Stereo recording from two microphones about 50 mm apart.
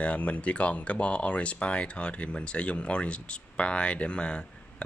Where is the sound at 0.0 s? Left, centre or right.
Left.